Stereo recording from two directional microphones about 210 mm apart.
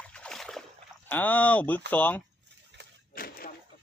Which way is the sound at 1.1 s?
10° left (ahead or behind).